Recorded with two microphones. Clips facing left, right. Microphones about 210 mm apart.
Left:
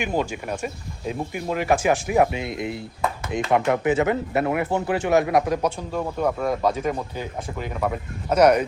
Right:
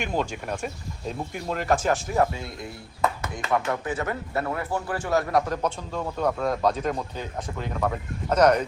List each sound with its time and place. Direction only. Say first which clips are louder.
0.0 s speech: left 3 dB; 5° left (ahead or behind)